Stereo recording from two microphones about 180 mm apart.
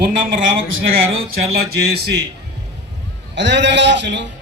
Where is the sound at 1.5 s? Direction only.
65° right (ahead or behind).